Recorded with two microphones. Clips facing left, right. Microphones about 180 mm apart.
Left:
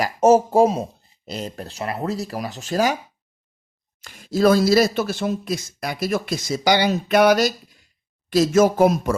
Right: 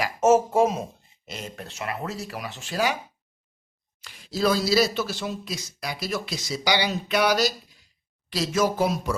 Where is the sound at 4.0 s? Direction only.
45° left (ahead or behind).